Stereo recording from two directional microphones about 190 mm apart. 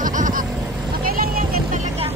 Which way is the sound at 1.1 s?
50° right (ahead or behind).